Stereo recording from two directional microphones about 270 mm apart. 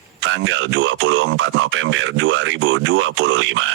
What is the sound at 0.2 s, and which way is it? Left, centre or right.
Speech, right.